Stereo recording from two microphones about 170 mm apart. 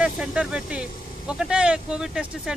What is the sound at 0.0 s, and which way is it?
A man's voice, 5° right (ahead or behind).